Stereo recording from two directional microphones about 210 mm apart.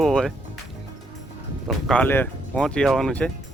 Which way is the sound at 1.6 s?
5° left (ahead or behind).